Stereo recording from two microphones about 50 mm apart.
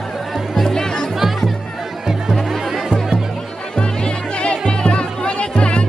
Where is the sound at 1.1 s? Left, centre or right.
Centre.